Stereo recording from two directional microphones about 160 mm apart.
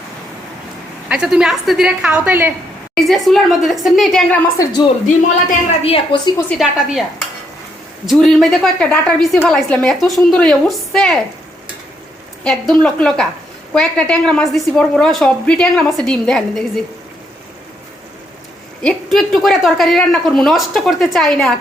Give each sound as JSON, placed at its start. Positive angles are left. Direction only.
{"t": 1.0, "sound": "a woman's voice", "side_deg": -5}
{"t": 2.9, "sound": "a woman's voice", "side_deg": 0}
{"t": 4.5, "sound": "speech", "side_deg": 20}
{"t": 5.8, "sound": "a woman's voice", "side_deg": 35}
{"t": 6.5, "sound": "a woman's voice", "side_deg": 0}
{"t": 8.0, "sound": "a woman's voice", "side_deg": 0}
{"t": 12.5, "sound": "a woman's voice", "side_deg": 5}
{"t": 18.8, "sound": "a woman's voice", "side_deg": 5}